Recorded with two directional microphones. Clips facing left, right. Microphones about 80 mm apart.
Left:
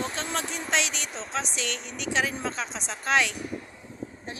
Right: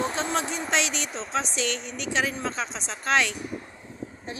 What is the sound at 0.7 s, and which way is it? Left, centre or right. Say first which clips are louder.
Speech: even; centre.